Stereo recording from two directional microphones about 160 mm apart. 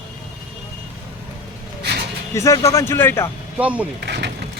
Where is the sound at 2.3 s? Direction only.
20° left (ahead or behind).